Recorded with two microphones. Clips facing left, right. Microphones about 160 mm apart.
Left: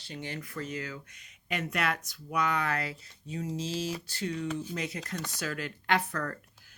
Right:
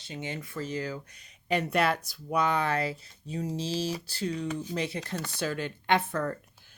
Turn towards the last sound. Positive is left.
turn(degrees=-25)  # may be behind; listen again after turning